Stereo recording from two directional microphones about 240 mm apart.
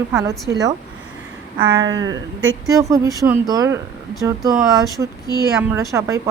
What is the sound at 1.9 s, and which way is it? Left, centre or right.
Speech, right.